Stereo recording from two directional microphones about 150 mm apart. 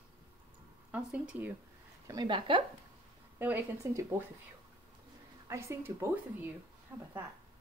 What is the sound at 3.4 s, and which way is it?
Speech, 15° right (ahead or behind).